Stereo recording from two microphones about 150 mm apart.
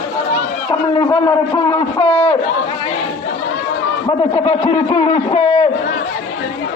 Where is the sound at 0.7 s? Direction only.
25° left (ahead or behind).